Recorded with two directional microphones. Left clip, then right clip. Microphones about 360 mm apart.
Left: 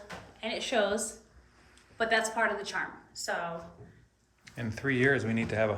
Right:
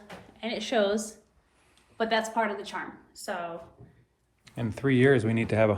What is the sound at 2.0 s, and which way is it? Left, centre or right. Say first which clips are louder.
Speech: right 1 dB; right.